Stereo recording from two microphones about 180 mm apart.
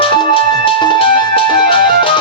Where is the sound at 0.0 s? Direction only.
25° left (ahead or behind).